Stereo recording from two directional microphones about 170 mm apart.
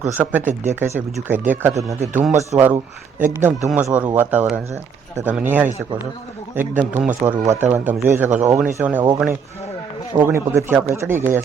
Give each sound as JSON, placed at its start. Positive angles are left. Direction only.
{"t": 0.0, "sound": "speech", "side_deg": -10}
{"t": 2.5, "sound": "speech", "side_deg": -5}